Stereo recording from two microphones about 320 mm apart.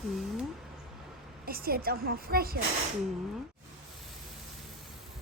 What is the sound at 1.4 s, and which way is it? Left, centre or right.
A woman's voice, right.